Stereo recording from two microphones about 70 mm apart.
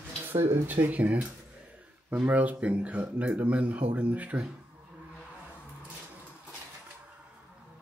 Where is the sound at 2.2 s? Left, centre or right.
Right.